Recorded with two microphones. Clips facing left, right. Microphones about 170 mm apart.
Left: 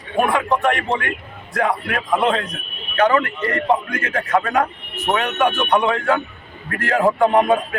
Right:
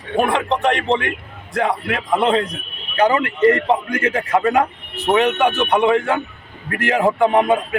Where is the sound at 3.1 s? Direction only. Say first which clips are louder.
Right 5 dB; 30° right (ahead or behind).